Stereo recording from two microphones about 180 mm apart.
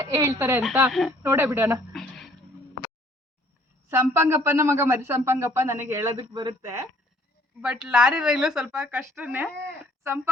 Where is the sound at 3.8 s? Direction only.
15° right (ahead or behind).